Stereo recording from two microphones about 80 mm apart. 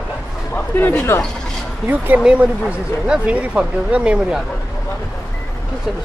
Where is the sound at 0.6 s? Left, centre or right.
Left.